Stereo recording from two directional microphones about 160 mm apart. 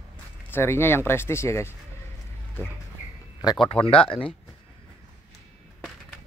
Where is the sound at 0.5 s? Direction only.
15° left (ahead or behind).